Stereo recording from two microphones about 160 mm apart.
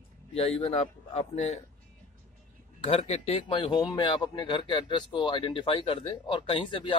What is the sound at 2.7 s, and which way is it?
A man's voice, 35° left (ahead or behind).